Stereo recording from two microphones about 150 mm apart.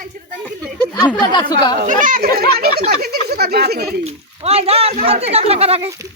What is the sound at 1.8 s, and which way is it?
Speech, 60° right (ahead or behind).